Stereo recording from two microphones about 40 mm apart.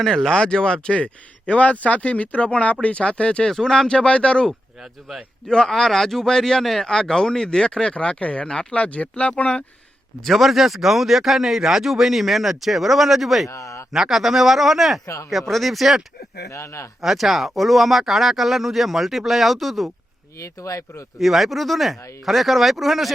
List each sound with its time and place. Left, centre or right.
0.0 s a man's voice: centre
0.3 s speech: centre
3.5 s a man's voice: centre
3.9 s speech: left
4.8 s speech: centre
5.5 s a man's voice: centre
6.6 s speech: centre
6.8 s speech: centre; by 9.3 s left
10.2 s speech: centre
17.0 s speech: centre
21.2 s speech: centre